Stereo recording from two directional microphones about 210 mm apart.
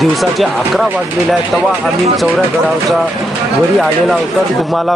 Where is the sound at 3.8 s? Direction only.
Centre (ahead or behind).